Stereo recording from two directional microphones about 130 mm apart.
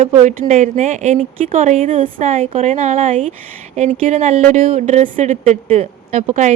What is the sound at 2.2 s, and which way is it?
Speech, 70° right (ahead or behind).